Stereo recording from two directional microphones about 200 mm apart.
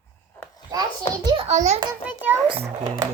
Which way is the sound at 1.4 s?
35° right (ahead or behind).